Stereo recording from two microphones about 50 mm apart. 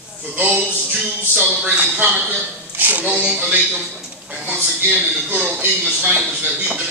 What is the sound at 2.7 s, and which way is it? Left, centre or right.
Speech, right.